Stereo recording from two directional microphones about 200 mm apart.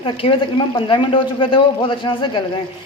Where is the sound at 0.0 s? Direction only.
25° left (ahead or behind).